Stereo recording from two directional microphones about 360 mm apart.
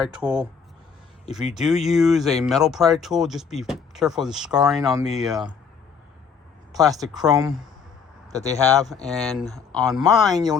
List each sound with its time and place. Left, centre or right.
0.0 s speech: centre
1.5 s speech: centre
6.7 s speech: centre
10.0 s speech: centre